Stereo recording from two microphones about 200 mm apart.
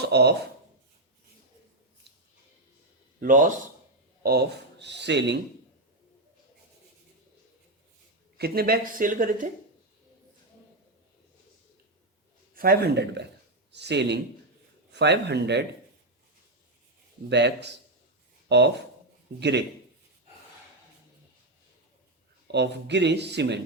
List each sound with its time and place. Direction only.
0.0 s speech: 55° right (ahead or behind)
3.2 s a man's voice: 40° right (ahead or behind)
4.2 s speech: 50° right (ahead or behind)
8.4 s speech: 50° right (ahead or behind)
12.5 s speech: 50° right (ahead or behind)
17.2 s speech: 60° right (ahead or behind)
22.5 s speech: 60° right (ahead or behind)